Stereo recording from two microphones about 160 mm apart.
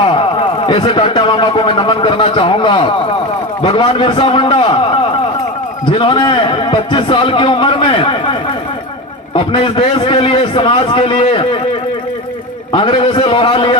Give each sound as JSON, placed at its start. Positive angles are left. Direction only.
{"t": 0.0, "sound": "a man's voice", "side_deg": 35}
{"t": 12.7, "sound": "a man's voice", "side_deg": 35}